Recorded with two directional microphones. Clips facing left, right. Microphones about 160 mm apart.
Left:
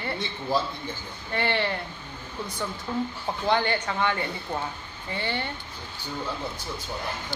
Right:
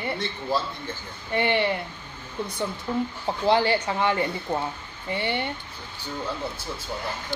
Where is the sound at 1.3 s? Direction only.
15° right (ahead or behind).